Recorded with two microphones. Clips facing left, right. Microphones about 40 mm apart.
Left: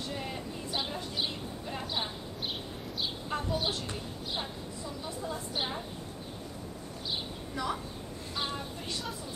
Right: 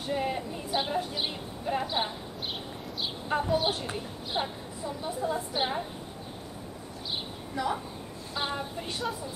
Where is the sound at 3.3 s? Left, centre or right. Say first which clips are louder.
Right 7 dB; right.